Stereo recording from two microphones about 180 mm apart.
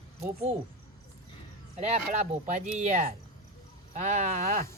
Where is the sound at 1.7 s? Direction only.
35° right (ahead or behind).